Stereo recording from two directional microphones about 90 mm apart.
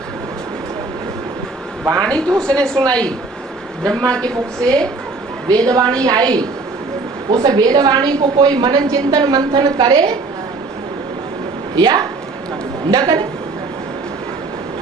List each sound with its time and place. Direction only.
1.8 s a man's voice: 40° right (ahead or behind)
2.0 s a woman's voice: 10° left (ahead or behind)
3.9 s a woman's voice: 10° left (ahead or behind)
5.5 s a woman's voice: 45° right (ahead or behind); by 10.1 s 70° right (ahead or behind)
11.8 s a woman's voice: 55° right (ahead or behind)